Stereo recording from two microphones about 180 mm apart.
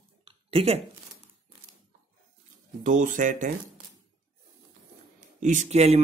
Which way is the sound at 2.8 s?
45° right (ahead or behind).